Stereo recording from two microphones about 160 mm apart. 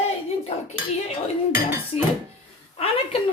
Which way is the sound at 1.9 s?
40° left (ahead or behind).